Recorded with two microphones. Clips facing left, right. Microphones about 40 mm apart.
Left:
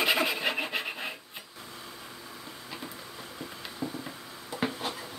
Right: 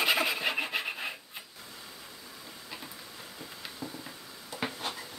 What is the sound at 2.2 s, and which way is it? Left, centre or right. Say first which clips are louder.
Vehicle: left 3 dB; centre.